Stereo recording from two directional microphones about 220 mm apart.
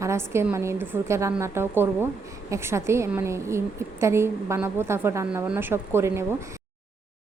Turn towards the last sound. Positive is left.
turn(degrees=-10)  # may be behind; listen again after turning